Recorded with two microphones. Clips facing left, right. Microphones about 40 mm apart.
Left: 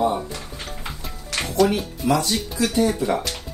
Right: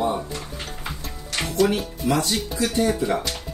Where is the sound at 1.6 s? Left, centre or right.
Left.